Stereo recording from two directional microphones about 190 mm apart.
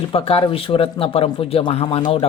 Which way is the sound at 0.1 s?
30° left (ahead or behind).